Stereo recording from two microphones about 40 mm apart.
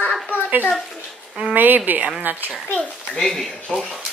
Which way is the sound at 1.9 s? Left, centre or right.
Right.